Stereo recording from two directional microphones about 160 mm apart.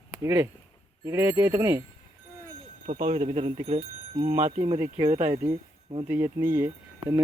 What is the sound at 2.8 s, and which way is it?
Speech, 45° right (ahead or behind).